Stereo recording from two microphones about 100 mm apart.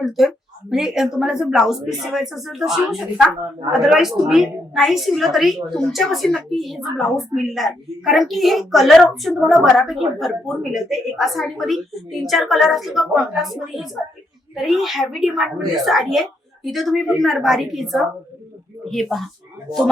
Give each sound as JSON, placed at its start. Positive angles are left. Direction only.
{"t": 0.0, "sound": "a woman's voice", "side_deg": 0}